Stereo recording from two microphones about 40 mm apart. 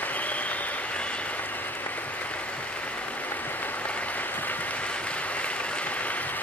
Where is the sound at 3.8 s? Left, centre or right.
Left.